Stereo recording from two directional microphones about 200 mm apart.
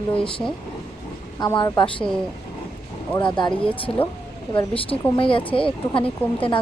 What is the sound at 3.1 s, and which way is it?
Speech, 25° left (ahead or behind).